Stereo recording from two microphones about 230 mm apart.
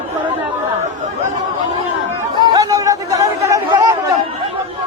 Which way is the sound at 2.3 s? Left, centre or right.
Centre.